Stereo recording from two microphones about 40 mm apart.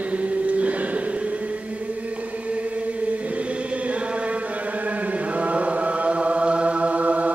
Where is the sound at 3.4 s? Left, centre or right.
Right.